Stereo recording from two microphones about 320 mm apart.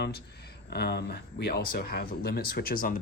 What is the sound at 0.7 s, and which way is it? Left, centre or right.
Speech, left.